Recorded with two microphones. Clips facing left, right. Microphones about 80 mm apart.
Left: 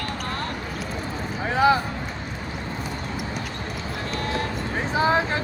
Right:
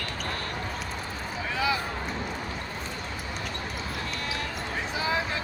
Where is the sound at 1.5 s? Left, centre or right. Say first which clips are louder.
Left 10 dB; left.